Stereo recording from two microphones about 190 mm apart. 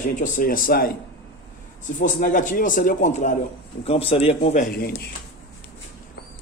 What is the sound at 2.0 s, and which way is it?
Speech, 45° left (ahead or behind).